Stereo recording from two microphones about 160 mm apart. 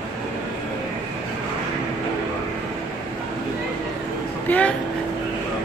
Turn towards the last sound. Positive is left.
turn(degrees=10)  # may be behind; listen again after turning